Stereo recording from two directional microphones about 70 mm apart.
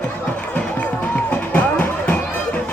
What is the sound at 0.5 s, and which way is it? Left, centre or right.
Music, left.